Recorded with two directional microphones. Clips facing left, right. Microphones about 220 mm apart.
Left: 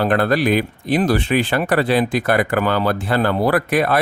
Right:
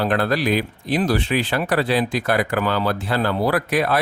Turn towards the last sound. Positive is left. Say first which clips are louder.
# left 3 dB
turn(degrees=50)  # may be behind; listen again after turning